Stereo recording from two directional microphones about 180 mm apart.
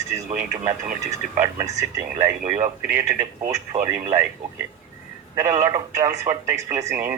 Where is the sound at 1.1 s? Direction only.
15° right (ahead or behind).